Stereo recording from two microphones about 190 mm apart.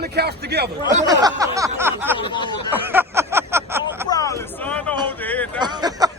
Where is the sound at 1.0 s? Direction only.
20° right (ahead or behind).